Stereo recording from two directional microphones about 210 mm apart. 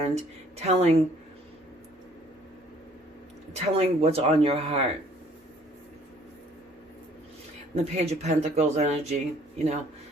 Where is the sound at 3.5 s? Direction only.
30° right (ahead or behind).